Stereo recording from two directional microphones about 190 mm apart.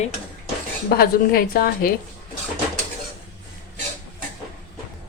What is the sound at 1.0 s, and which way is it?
Speech, 50° left (ahead or behind).